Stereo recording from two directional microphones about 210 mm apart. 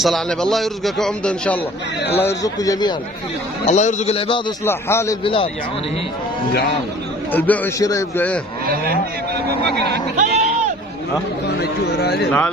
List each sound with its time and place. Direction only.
0.0 s a man's voice: centre (ahead or behind); by 2.9 s 15° left (ahead or behind)
3.6 s a man's voice: 30° left (ahead or behind)
4.6 s a man's voice: 10° left (ahead or behind)
5.2 s a man's voice: 25° left (ahead or behind)
7.3 s a man's voice: 10° left (ahead or behind)
9.7 s speech: 50° right (ahead or behind)
10.1 s sheep: 35° right (ahead or behind)
11.4 s speech: 50° left (ahead or behind)